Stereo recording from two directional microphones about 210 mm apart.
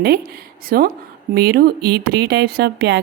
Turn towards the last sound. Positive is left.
turn(degrees=-50)  # may be behind; listen again after turning